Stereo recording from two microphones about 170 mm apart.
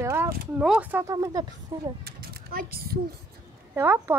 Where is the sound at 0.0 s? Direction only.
15° right (ahead or behind).